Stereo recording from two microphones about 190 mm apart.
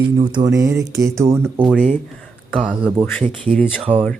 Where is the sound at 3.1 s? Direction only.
10° left (ahead or behind).